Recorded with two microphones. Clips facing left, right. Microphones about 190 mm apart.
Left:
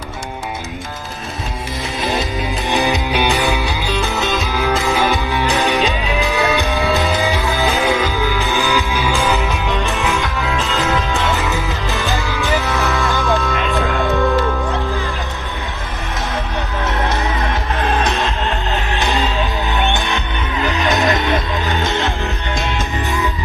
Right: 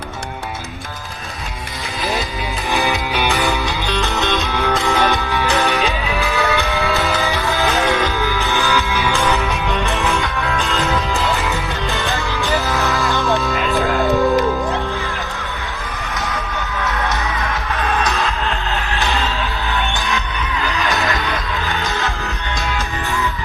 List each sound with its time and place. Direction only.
2.6 s music: 15° left (ahead or behind)
5.3 s music: 15° left (ahead or behind)
9.1 s music: 30° left (ahead or behind)
9.4 s music: centre (ahead or behind)
14.2 s music: 15° right (ahead or behind)
16.8 s music: 30° left (ahead or behind)
18.9 s music: 15° left (ahead or behind)
20.7 s music: 20° left (ahead or behind)